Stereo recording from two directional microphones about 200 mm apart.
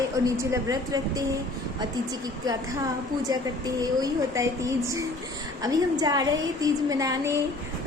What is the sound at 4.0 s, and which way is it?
A woman's voice, 15° right (ahead or behind).